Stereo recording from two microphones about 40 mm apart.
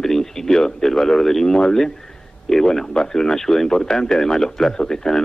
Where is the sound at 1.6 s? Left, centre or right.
Centre.